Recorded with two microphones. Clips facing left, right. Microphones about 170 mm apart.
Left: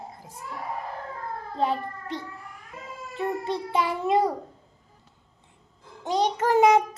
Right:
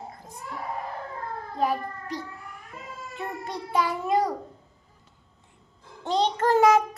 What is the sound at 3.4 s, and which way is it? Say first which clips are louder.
Speech: right 3 dB; 25° left (ahead or behind).